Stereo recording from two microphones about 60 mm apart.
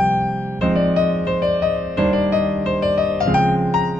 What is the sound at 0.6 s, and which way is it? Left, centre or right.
Music, centre.